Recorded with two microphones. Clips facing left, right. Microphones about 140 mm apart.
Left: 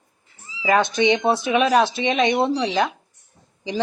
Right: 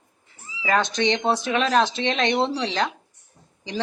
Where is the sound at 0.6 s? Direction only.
10° left (ahead or behind).